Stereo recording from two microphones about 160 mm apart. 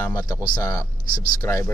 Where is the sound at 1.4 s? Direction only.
15° left (ahead or behind).